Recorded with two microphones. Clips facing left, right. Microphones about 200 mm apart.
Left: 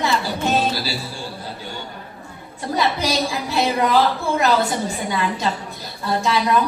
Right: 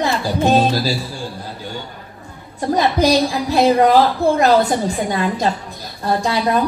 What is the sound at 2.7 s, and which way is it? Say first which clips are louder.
A woman's voice: right 6 dB; 40° right (ahead or behind).